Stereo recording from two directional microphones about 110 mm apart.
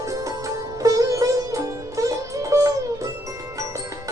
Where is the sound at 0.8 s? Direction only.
30° right (ahead or behind).